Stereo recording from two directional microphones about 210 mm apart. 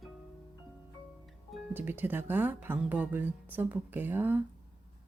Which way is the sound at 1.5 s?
10° right (ahead or behind).